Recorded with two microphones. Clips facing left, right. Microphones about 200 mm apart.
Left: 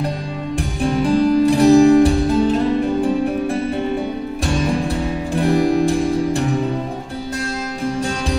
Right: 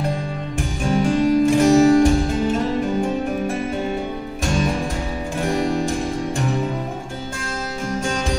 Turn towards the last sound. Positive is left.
turn(degrees=35)  # may be behind; listen again after turning